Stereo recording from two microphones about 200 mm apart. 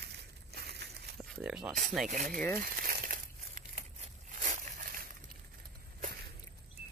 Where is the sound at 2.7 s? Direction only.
45° right (ahead or behind).